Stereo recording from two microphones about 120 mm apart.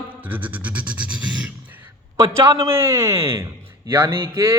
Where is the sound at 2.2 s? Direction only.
25° right (ahead or behind).